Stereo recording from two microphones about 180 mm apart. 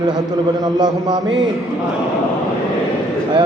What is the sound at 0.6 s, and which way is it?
Speech, 20° right (ahead or behind).